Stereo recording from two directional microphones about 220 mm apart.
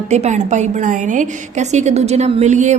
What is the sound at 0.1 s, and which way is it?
A woman's voice, 30° right (ahead or behind).